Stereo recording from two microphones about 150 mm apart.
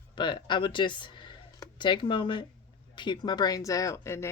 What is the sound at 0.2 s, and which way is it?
Speech, 30° left (ahead or behind).